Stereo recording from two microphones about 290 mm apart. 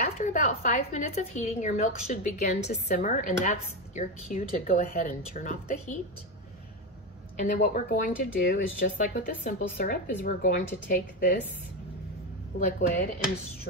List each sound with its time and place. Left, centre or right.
0.0 s speech: left
7.4 s speech: left
12.5 s speech: left